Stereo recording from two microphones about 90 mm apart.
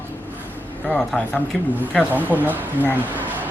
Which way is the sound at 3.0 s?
20° right (ahead or behind).